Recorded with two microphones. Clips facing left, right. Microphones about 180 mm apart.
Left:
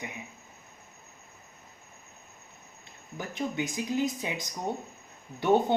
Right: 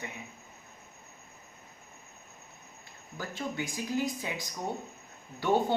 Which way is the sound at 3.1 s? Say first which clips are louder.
Left 3 dB; 20° left (ahead or behind).